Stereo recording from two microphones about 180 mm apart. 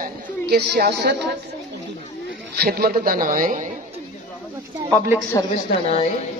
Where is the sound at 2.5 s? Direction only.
60° right (ahead or behind).